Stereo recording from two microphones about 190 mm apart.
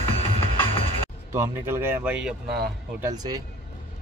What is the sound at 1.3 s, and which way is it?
Speech, 15° right (ahead or behind).